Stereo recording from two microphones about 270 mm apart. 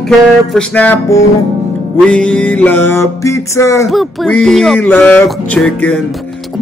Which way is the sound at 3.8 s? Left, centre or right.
Centre.